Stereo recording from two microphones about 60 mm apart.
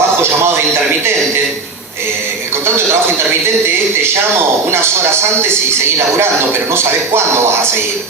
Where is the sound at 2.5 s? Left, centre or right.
Right.